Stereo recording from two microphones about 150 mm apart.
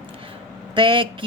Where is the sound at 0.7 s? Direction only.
35° right (ahead or behind).